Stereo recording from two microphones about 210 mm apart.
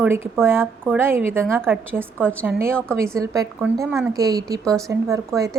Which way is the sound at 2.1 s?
5° left (ahead or behind).